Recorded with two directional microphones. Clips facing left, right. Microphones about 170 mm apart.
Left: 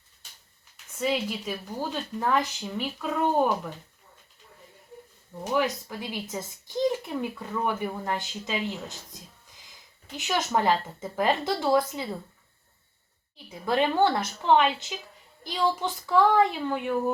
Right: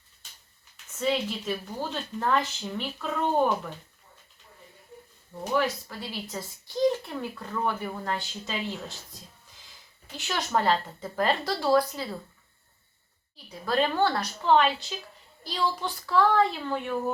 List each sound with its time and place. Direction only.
0.9 s speech: 10° left (ahead or behind)
5.5 s speech: 15° left (ahead or behind)
10.2 s a woman's voice: 15° left (ahead or behind)
13.3 s a woman's voice: 20° left (ahead or behind)